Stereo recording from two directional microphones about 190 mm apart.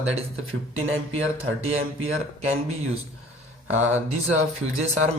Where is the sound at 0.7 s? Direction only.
90° right.